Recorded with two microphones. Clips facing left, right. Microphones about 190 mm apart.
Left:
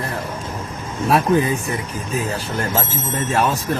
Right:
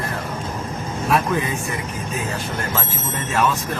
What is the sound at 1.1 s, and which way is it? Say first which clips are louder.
Speech: left 4 dB; 35° left (ahead or behind).